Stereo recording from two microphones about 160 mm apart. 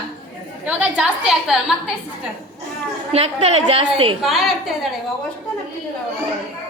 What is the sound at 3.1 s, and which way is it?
A woman's voice, 40° right (ahead or behind).